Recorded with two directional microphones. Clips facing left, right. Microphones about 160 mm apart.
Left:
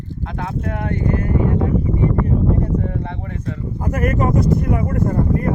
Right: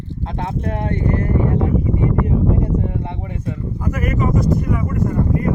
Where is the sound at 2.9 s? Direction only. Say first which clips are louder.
Even; 15° right (ahead or behind).